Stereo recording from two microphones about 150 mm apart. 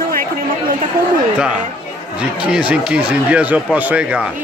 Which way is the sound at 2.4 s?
10° right (ahead or behind).